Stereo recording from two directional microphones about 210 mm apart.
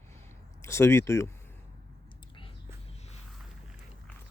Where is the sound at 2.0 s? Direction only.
25° left (ahead or behind).